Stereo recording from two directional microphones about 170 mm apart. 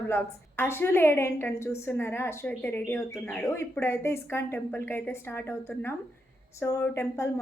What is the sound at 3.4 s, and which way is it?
Speech, 15° left (ahead or behind).